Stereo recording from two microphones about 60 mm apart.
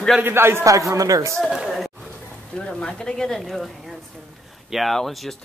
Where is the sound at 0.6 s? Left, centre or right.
Right.